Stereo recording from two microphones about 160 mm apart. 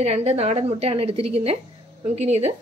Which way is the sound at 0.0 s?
40° right (ahead or behind).